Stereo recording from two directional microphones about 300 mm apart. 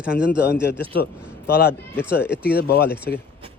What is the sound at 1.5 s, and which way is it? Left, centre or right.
A man's voice, left.